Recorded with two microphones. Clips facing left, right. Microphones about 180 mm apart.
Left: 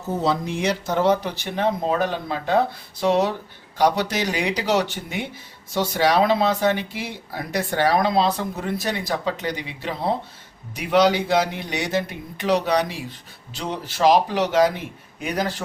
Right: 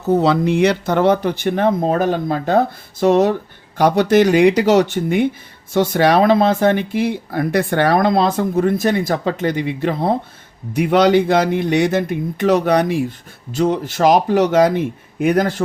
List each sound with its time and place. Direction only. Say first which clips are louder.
0.0 s speech: right 8 dB; 70° right (ahead or behind); by 15.6 s 50° right (ahead or behind)